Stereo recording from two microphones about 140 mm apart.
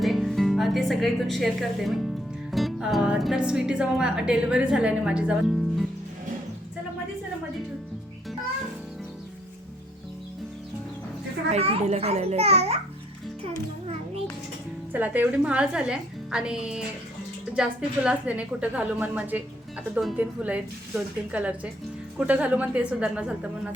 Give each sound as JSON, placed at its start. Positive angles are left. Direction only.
{"t": 0.0, "sound": "speech", "side_deg": 0}
{"t": 11.5, "sound": "a child's voice", "side_deg": -45}
{"t": 14.9, "sound": "a woman's voice", "side_deg": -10}